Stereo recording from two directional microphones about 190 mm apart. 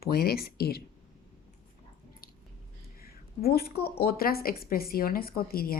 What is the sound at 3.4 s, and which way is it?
Speech, 55° left (ahead or behind).